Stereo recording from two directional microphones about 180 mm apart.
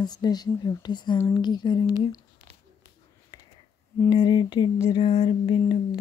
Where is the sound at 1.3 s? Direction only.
25° left (ahead or behind).